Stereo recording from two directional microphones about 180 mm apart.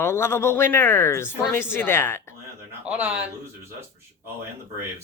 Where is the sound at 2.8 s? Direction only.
10° right (ahead or behind).